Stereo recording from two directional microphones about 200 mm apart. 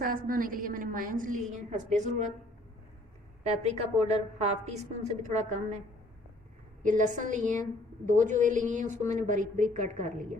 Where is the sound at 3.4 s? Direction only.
35° right (ahead or behind).